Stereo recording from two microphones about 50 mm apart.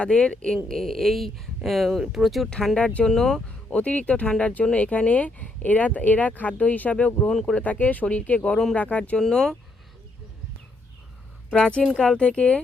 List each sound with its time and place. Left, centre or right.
0.0 s speech: centre
3.0 s speech: centre
3.7 s speech: left
9.1 s speech: centre
11.5 s speech: left